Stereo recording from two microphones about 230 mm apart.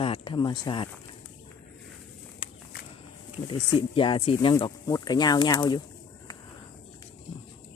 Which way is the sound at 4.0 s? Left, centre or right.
Left.